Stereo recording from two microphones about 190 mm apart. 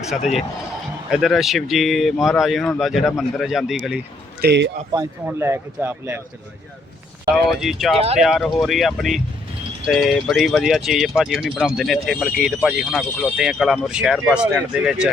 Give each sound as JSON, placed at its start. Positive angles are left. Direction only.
{"t": 0.2, "sound": "speech", "side_deg": 35}
{"t": 1.1, "sound": "speech", "side_deg": 0}
{"t": 4.4, "sound": "speech", "side_deg": -60}
{"t": 4.9, "sound": "speech", "side_deg": -10}
{"t": 7.6, "sound": "speech", "side_deg": 0}